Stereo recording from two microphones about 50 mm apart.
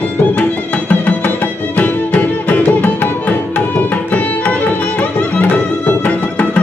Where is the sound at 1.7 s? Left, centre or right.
Left.